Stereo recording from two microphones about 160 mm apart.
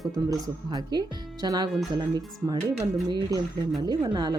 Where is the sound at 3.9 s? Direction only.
25° right (ahead or behind).